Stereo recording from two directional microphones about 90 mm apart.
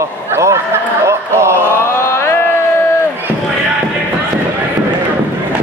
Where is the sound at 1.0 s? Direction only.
30° right (ahead or behind).